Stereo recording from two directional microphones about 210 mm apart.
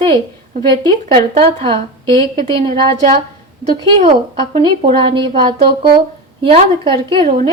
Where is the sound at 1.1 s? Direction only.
25° right (ahead or behind).